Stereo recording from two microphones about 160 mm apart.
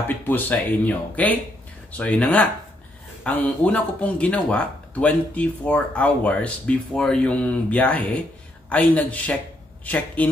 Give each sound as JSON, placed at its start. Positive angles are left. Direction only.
{"t": 0.3, "sound": "speech", "side_deg": 10}